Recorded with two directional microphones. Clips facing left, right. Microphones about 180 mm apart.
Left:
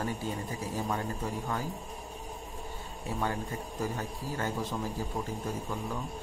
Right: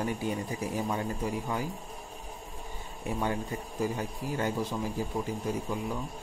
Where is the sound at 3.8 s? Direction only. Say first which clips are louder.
Right 4 dB; 15° right (ahead or behind).